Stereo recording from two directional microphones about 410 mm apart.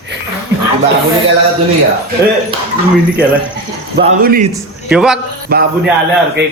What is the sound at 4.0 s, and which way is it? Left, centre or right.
Speech, centre.